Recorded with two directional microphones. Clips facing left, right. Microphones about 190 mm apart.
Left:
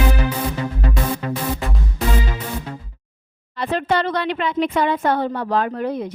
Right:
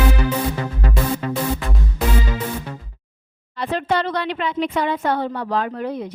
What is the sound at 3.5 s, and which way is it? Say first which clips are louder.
A woman's voice: left 1 dB; 55° left (ahead or behind).